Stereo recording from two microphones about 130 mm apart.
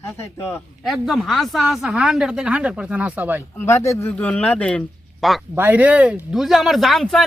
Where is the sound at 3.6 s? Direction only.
20° left (ahead or behind); by 5.4 s centre (ahead or behind).